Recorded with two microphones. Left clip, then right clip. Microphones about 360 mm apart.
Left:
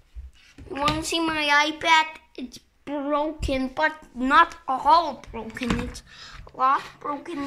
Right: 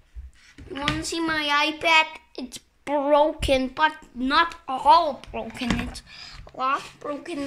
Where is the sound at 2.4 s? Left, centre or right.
Centre.